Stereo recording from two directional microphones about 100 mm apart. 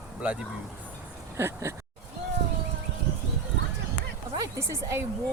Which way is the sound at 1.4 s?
30° right (ahead or behind).